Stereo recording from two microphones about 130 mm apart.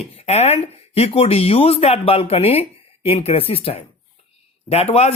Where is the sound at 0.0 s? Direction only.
55° left (ahead or behind).